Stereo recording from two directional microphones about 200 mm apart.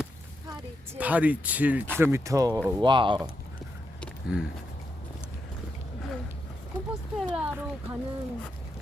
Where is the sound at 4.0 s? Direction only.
Centre (ahead or behind).